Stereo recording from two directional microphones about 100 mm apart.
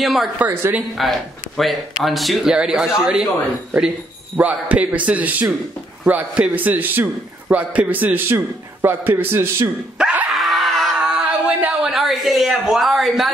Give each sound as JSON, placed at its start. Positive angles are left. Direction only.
{"t": 0.0, "sound": "a man's voice", "side_deg": 0}
{"t": 0.5, "sound": "a man's voice", "side_deg": -25}
{"t": 0.9, "sound": "a man's voice", "side_deg": 0}
{"t": 4.4, "sound": "a man's voice", "side_deg": -15}
{"t": 9.9, "sound": "dog", "side_deg": -10}
{"t": 11.4, "sound": "a sound", "side_deg": -15}
{"t": 11.9, "sound": "a man's voice", "side_deg": 0}